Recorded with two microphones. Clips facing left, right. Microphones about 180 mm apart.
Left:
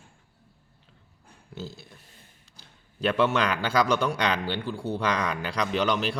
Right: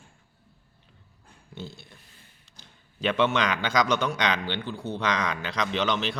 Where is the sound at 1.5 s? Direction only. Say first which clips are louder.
Left 2 dB; 5° left (ahead or behind).